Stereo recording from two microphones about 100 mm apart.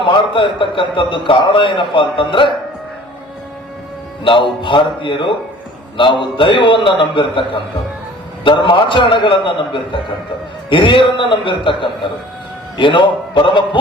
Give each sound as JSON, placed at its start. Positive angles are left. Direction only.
{"t": 0.0, "sound": "a man's voice", "side_deg": 55}
{"t": 4.2, "sound": "a man's voice", "side_deg": 60}